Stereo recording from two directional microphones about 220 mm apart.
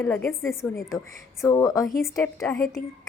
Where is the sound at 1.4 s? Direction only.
15° left (ahead or behind).